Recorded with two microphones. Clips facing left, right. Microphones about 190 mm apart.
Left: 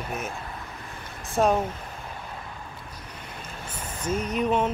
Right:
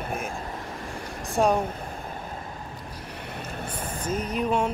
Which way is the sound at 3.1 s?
65° right (ahead or behind).